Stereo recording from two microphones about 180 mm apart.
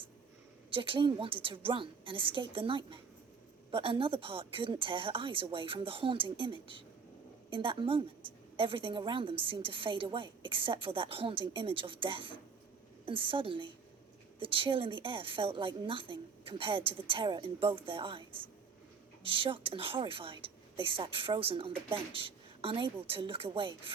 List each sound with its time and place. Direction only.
0.7 s a woman's voice: 30° right (ahead or behind)